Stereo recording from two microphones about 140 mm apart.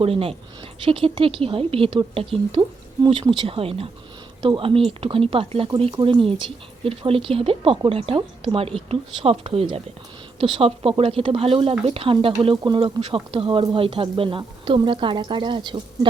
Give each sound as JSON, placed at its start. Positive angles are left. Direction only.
{"t": 0.0, "sound": "a woman's voice", "side_deg": -40}